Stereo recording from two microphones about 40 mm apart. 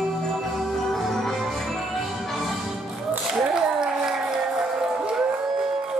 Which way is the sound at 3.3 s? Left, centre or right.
Centre.